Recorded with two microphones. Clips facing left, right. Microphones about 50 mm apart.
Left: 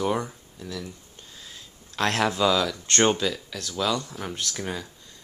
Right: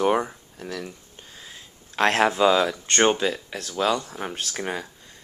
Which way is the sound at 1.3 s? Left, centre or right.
Right.